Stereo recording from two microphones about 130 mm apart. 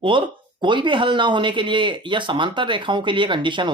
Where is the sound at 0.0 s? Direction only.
40° right (ahead or behind).